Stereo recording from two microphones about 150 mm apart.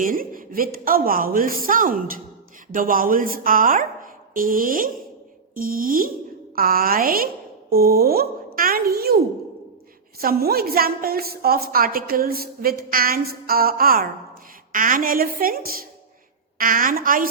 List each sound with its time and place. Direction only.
0.0 s a woman's voice: 70° right (ahead or behind)
7.7 s a child's voice: 90° right
14.7 s a woman's voice: 60° right (ahead or behind)
16.6 s a woman's voice: 65° right (ahead or behind)